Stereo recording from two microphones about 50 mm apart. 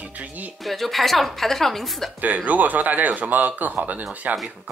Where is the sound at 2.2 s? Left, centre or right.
Right.